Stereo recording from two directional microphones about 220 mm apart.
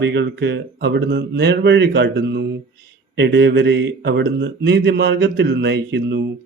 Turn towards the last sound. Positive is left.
turn(degrees=-50)  # may be behind; listen again after turning